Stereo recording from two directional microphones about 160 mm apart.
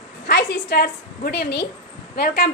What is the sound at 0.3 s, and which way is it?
A woman's voice, 90° left.